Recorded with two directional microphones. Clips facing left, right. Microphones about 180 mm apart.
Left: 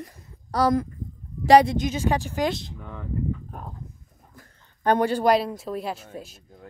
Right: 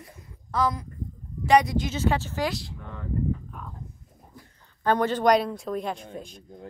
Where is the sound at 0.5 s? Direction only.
45° left (ahead or behind).